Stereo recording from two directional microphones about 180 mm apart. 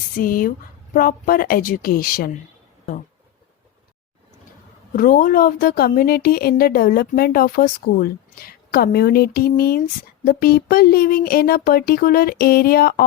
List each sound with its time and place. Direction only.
0.2 s a woman's voice: 50° left (ahead or behind)
4.9 s a woman's voice: 50° left (ahead or behind)